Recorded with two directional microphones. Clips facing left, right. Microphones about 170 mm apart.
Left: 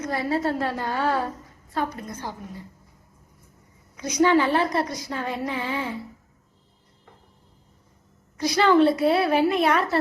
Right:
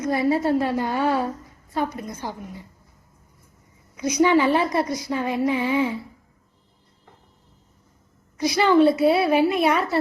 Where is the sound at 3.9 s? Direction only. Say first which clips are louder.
Right 1 dB; 10° right (ahead or behind).